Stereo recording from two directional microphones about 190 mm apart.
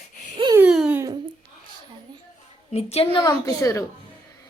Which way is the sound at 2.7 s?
35° left (ahead or behind).